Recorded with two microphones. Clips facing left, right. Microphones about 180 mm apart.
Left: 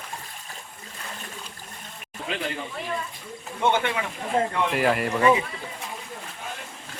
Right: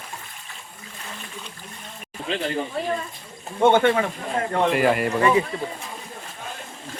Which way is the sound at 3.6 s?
50° right (ahead or behind).